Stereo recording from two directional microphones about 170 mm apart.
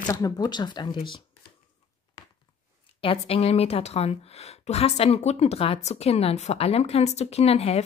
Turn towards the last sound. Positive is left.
turn(degrees=35)  # may be behind; listen again after turning